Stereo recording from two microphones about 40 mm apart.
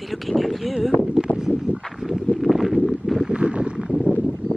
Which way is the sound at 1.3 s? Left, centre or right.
Centre.